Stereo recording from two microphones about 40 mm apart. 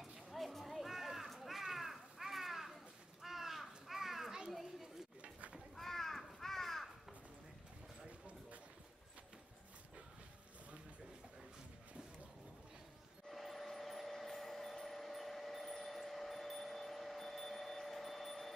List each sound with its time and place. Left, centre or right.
0.0 s a sound: centre
4.5 s children playing: centre
5.8 s crow: centre
13.3 s vehicle: centre